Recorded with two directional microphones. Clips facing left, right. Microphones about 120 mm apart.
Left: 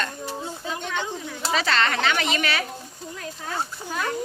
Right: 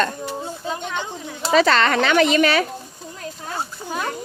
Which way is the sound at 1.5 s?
45° right (ahead or behind).